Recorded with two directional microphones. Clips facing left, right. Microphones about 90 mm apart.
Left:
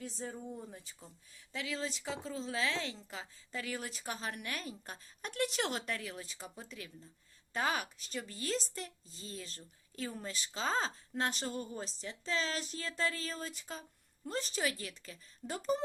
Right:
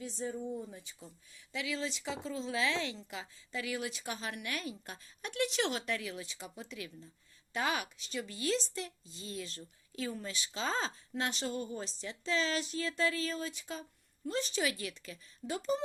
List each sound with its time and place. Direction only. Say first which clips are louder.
1.5 s speech: right 2 dB; 40° left (ahead or behind)